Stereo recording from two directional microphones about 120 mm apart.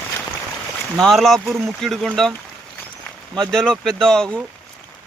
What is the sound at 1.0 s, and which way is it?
Speech, centre (ahead or behind).